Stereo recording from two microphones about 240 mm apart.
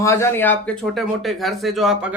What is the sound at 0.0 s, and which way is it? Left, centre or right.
Speech, centre.